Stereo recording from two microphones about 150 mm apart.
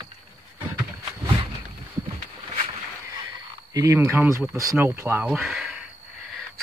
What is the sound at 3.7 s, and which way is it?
Speech, 20° right (ahead or behind).